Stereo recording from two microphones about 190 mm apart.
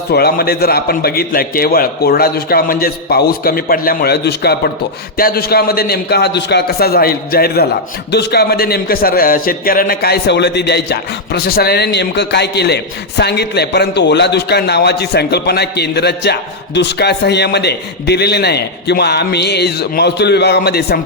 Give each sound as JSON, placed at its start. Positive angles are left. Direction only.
{"t": 0.1, "sound": "a man's voice", "side_deg": 55}